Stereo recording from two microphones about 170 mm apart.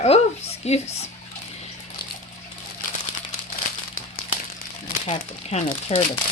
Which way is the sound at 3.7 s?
55° left (ahead or behind).